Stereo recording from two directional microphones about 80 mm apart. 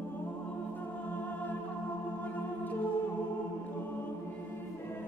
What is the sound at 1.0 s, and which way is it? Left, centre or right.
Music, left.